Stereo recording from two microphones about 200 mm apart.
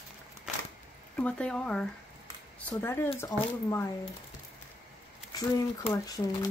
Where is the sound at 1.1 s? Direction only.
5° left (ahead or behind).